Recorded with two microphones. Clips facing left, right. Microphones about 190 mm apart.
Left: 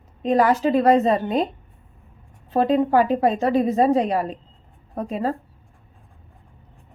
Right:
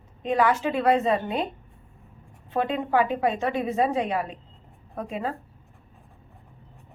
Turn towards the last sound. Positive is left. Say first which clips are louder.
# left 6 dB
turn(degrees=40)  # may be behind; listen again after turning